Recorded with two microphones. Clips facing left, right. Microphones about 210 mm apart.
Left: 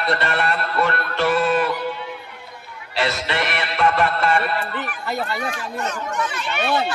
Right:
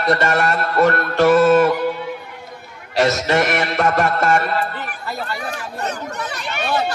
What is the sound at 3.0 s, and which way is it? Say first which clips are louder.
Music: right 7 dB; 45° right (ahead or behind).